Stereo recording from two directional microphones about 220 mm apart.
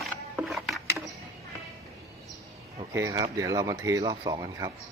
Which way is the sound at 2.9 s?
15° right (ahead or behind).